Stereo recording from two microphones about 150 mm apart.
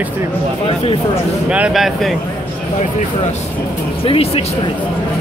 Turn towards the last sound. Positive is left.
turn(degrees=40)  # may be behind; listen again after turning